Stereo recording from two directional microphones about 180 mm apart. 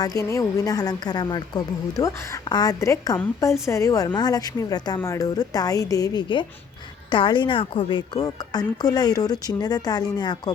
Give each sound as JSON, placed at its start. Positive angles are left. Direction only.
{"t": 0.0, "sound": "a woman's voice", "side_deg": 20}